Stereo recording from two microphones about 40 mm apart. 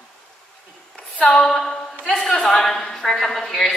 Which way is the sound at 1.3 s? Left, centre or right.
Centre.